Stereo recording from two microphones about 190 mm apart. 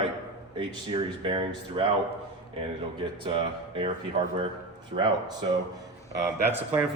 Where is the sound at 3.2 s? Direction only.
30° right (ahead or behind).